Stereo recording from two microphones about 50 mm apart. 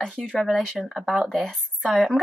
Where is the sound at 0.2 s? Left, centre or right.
Centre.